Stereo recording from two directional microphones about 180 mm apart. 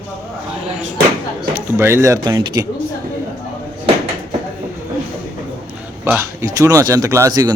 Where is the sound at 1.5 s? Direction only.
15° right (ahead or behind).